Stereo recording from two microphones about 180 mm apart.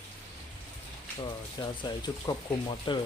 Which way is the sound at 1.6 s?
20° left (ahead or behind).